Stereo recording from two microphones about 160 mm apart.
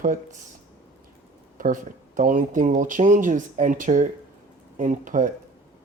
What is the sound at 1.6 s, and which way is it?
Speech, 55° right (ahead or behind).